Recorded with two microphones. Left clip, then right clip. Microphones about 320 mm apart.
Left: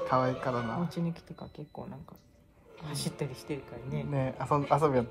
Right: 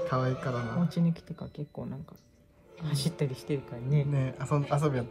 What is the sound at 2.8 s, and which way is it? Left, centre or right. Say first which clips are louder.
Speech: right 3 dB; centre.